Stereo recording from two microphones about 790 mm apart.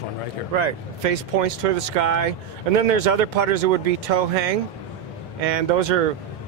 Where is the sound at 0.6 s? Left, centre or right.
Right.